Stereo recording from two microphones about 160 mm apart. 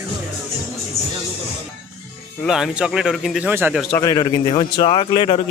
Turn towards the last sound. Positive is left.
turn(degrees=35)  # may be behind; listen again after turning